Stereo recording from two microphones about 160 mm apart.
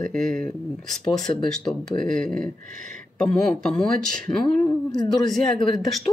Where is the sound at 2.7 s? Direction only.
55° right (ahead or behind).